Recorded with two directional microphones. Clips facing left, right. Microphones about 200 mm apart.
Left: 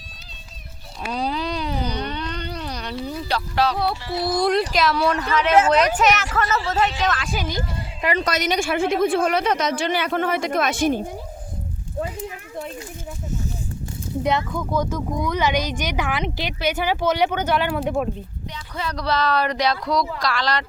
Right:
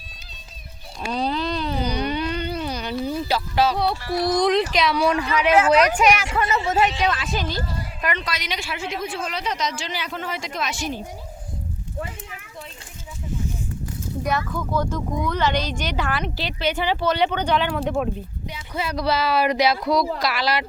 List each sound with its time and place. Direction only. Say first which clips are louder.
1.0 s a sound: right 1 dB; 10° left (ahead or behind)
1.8 s a sound: right 3 dB; 10° right (ahead or behind)
4.0 s speech: right 2 dB; 25° left (ahead or behind)
4.3 s speech: even; 10° left (ahead or behind)
5.2 s speech: left 3 dB; 10° right (ahead or behind)
7.3 s speech: even; 10° left (ahead or behind)
7.8 s a sound: left 3 dB; 30° left (ahead or behind)
8.2 s speech: left 8 dB; 45° left (ahead or behind)
15.2 s speech: left 1 dB; 15° left (ahead or behind)
18.5 s speech: right 2 dB; 10° right (ahead or behind)